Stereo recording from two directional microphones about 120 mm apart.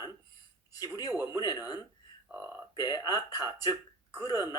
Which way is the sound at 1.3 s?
35° left (ahead or behind).